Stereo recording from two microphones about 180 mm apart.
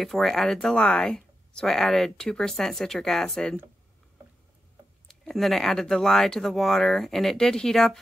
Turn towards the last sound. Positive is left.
turn(degrees=0)  # may be behind; listen again after turning